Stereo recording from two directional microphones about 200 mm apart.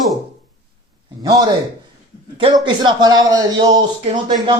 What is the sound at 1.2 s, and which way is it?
Speech, 20° right (ahead or behind).